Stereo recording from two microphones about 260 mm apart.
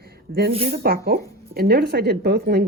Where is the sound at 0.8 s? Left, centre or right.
Right.